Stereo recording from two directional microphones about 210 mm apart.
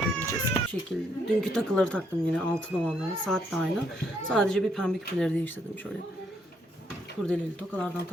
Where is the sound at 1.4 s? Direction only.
5° left (ahead or behind).